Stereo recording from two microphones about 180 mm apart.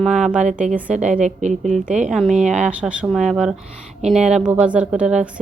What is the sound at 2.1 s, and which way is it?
A woman's voice, centre (ahead or behind).